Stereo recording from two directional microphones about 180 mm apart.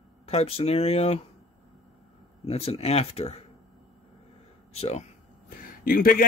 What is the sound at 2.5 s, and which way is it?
Speech, 35° left (ahead or behind).